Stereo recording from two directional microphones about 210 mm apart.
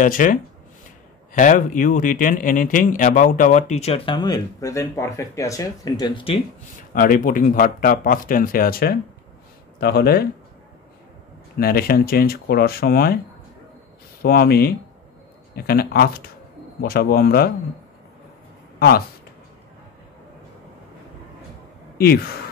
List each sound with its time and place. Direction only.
0.0 s speech: 40° left (ahead or behind); by 6.3 s 20° left (ahead or behind)
6.9 s speech: 40° left (ahead or behind)
11.5 s speech: 45° left (ahead or behind)
14.2 s speech: 45° left (ahead or behind)
18.8 s speech: 45° left (ahead or behind)
21.9 s sigh: 45° left (ahead or behind)